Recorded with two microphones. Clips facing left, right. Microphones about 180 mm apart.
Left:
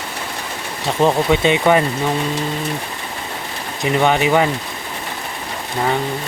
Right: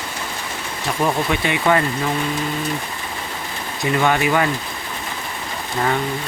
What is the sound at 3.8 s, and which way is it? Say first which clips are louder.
Speech: left 2 dB; 20° left (ahead or behind).